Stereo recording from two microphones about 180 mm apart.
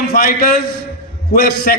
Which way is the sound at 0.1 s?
55° left (ahead or behind).